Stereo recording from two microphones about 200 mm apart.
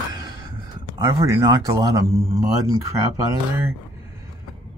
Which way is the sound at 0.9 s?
15° right (ahead or behind).